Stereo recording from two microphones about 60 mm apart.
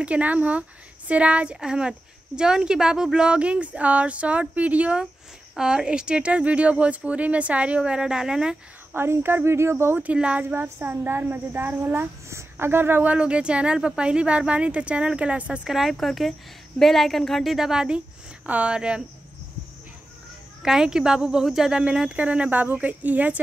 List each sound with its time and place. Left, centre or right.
0.0 s a woman's voice: right
5.6 s a woman's voice: centre
8.9 s speech: right
10.1 s a woman's voice: centre
10.5 s a woman's voice: right
12.3 s speech: right
13.0 s a woman's voice: centre
15.7 s speech: centre
20.6 s speech: centre; by 23.4 s right